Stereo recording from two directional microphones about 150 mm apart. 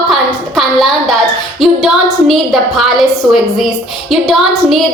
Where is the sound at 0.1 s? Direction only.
Centre (ahead or behind).